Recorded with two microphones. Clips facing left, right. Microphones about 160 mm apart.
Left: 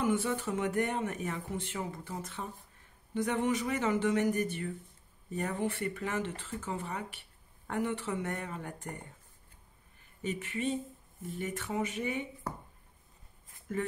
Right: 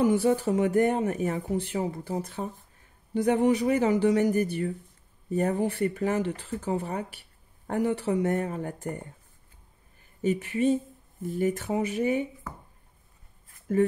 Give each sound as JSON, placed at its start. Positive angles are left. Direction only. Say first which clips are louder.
{"t": 0.0, "sound": "speech", "louder": "right 8 dB", "side_deg": -35}
{"t": 10.2, "sound": "speech", "louder": "right 10 dB", "side_deg": -40}